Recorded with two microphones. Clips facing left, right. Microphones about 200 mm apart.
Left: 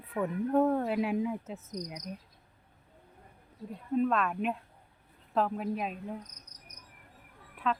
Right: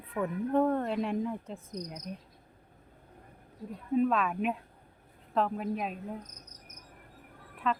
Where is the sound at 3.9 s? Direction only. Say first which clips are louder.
Right 1 dB; centre (ahead or behind).